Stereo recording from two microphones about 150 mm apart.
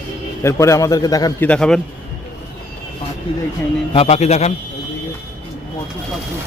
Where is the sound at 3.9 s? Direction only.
45° left (ahead or behind).